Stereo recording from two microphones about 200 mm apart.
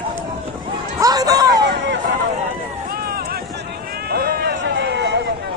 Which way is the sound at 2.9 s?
50° right (ahead or behind).